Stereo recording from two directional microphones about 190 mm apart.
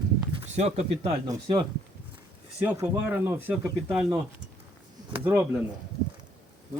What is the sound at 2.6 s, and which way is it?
Speech, 10° right (ahead or behind).